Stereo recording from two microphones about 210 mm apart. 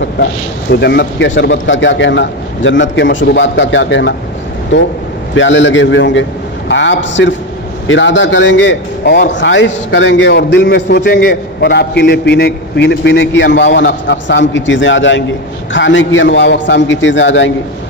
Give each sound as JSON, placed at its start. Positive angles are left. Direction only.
{"t": 0.2, "sound": "a man's voice", "side_deg": 50}
{"t": 5.3, "sound": "a man's voice", "side_deg": 60}